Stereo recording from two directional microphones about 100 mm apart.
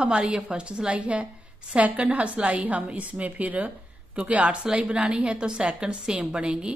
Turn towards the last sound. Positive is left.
turn(degrees=-10)  # may be behind; listen again after turning